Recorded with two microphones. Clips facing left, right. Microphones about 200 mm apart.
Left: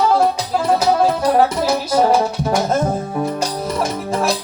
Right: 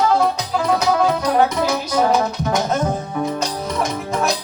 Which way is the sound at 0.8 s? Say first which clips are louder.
Left 2 dB; 30° left (ahead or behind).